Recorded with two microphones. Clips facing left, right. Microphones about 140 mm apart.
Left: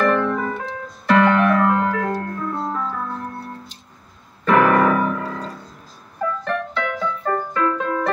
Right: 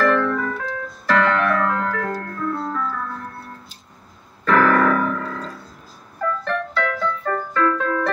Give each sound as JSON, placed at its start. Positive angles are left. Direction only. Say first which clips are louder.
{"t": 0.1, "sound": "music", "louder": "even", "side_deg": 20}
{"t": 1.4, "sound": "organ", "louder": "left 4 dB", "side_deg": 15}
{"t": 4.5, "sound": "piano", "louder": "left 1 dB", "side_deg": 10}
{"t": 6.4, "sound": "keyboard", "louder": "right 1 dB", "side_deg": 15}